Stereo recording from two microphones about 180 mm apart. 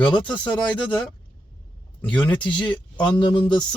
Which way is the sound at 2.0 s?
25° left (ahead or behind).